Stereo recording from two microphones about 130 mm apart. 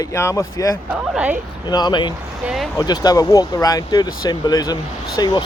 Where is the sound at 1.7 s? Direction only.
35° left (ahead or behind).